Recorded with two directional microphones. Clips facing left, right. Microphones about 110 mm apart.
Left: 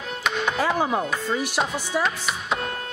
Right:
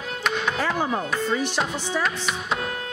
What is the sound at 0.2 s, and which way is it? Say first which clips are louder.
Music: left 1 dB; 5° left (ahead or behind).